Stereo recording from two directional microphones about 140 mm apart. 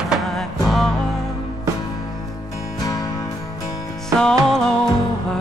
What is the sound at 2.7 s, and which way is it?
Music, 25° left (ahead or behind).